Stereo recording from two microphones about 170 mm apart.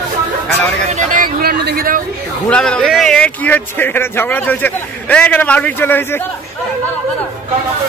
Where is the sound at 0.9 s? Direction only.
50° right (ahead or behind).